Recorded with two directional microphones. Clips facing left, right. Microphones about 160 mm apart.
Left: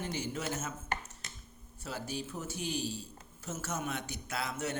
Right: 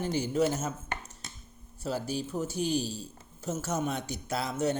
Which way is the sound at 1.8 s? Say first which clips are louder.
Right 7 dB; 35° right (ahead or behind).